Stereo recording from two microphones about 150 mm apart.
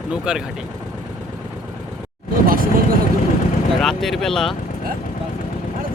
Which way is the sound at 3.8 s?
Centre (ahead or behind).